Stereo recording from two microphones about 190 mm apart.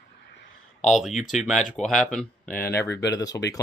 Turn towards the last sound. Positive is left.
turn(degrees=20)  # may be behind; listen again after turning